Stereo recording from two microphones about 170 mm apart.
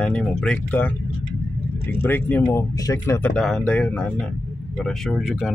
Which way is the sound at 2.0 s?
10° left (ahead or behind).